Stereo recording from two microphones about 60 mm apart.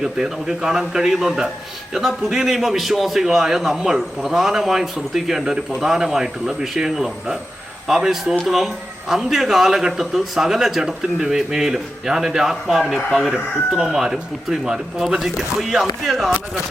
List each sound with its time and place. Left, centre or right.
0.0 s a man's voice: centre